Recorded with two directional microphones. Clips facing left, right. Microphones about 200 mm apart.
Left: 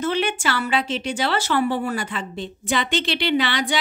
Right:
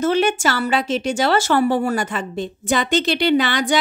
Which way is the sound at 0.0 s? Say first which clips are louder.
Right 5 dB; 45° right (ahead or behind).